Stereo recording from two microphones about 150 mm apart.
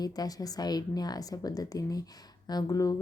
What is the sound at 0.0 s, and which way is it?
A woman's voice, 25° left (ahead or behind).